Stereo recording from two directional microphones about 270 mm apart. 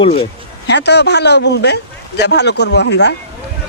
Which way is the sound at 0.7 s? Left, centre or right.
Left.